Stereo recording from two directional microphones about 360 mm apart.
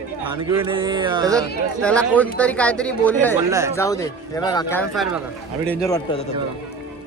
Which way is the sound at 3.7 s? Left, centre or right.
Centre.